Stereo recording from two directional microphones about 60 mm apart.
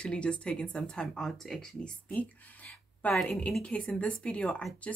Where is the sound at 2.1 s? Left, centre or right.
Left.